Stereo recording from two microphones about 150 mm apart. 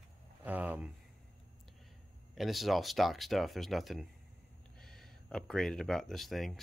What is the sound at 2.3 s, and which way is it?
Speech, centre (ahead or behind).